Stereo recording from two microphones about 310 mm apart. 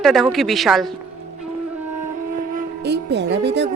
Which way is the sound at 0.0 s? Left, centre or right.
Centre.